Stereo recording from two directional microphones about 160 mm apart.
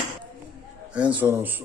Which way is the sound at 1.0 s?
10° right (ahead or behind).